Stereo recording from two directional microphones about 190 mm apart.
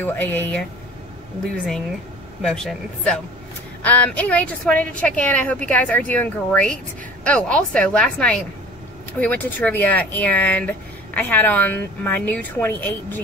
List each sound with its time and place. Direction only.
0.0 s a woman's voice: 10° left (ahead or behind)
2.4 s a woman's voice: 5° left (ahead or behind)